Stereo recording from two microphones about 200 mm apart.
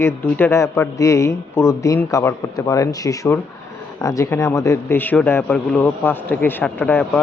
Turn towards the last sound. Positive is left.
turn(degrees=10)  # may be behind; listen again after turning